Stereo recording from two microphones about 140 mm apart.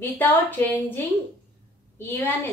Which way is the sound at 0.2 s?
15° left (ahead or behind).